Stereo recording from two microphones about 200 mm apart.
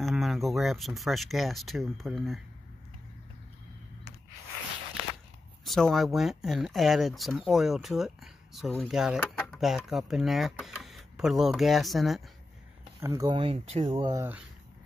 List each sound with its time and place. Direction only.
0.0 s speech: centre (ahead or behind)
5.7 s speech: centre (ahead or behind)
13.0 s speech: 15° right (ahead or behind)